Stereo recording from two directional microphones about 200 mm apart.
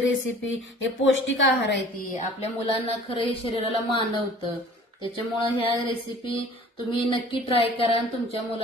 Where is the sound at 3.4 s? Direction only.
25° left (ahead or behind).